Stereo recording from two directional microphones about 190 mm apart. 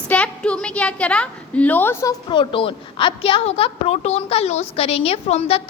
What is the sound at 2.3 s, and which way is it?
A woman's voice, 25° left (ahead or behind).